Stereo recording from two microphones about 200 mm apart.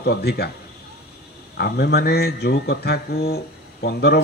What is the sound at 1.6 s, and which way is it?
Speech, 55° left (ahead or behind).